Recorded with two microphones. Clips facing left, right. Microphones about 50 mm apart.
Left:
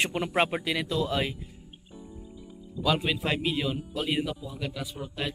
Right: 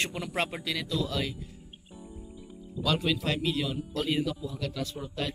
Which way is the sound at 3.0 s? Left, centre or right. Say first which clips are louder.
Left 1 dB; left.